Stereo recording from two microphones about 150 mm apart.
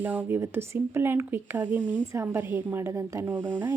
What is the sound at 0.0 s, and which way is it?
Speech, 15° right (ahead or behind).